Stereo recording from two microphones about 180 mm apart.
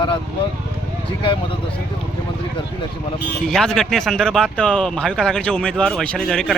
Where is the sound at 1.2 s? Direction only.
30° left (ahead or behind).